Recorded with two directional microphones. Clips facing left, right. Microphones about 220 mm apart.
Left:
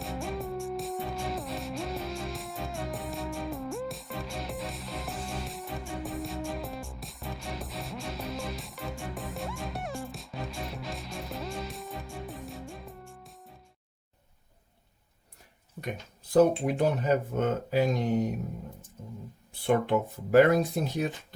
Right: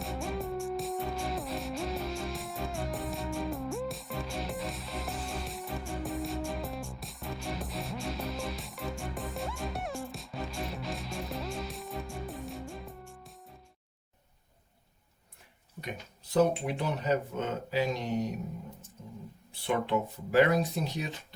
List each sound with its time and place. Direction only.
0.0 s music: centre (ahead or behind)
16.3 s speech: 50° left (ahead or behind)
19.6 s speech: 50° left (ahead or behind)